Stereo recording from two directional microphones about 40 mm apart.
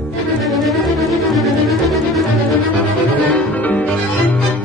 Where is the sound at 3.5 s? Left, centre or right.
Left.